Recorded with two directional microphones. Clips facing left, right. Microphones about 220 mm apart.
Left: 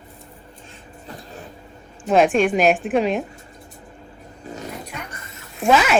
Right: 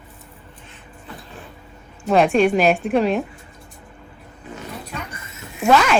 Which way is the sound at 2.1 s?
Centre (ahead or behind).